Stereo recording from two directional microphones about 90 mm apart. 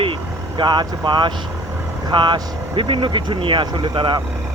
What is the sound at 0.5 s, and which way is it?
Speech, 55° right (ahead or behind).